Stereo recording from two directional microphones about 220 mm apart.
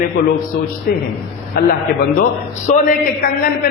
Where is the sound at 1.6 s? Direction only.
40° left (ahead or behind).